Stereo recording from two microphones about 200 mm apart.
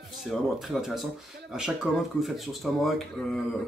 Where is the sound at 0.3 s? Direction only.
Centre (ahead or behind).